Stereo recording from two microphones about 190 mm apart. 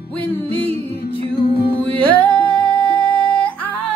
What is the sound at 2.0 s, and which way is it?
Music, 10° left (ahead or behind).